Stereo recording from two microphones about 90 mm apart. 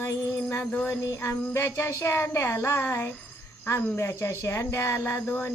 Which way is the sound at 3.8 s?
30° left (ahead or behind).